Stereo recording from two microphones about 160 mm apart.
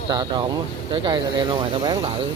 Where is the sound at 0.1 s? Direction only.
30° right (ahead or behind).